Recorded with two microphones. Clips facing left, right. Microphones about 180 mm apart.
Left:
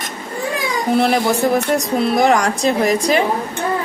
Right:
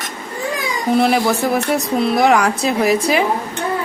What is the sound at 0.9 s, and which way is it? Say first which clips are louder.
Speech: right 1 dB; centre (ahead or behind).